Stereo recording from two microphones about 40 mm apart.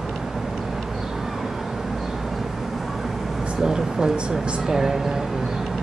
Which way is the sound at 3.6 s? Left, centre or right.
Centre.